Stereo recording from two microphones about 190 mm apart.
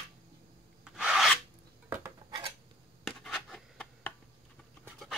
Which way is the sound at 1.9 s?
20° right (ahead or behind).